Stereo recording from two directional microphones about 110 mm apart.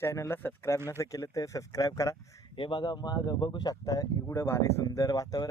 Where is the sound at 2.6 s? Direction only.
45° left (ahead or behind).